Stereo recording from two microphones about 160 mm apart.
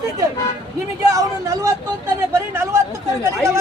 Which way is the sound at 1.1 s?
20° right (ahead or behind).